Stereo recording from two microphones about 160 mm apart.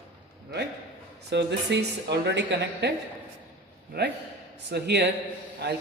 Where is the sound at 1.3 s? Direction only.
90° right.